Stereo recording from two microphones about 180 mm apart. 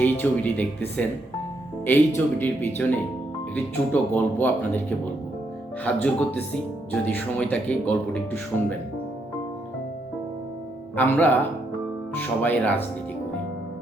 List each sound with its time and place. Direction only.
0.0 s speech: 10° left (ahead or behind)
4.1 s speech: 10° left (ahead or behind)
10.9 s speech: 10° left (ahead or behind)